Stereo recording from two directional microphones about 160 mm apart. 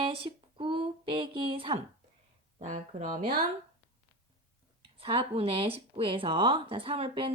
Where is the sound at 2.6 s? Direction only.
50° right (ahead or behind).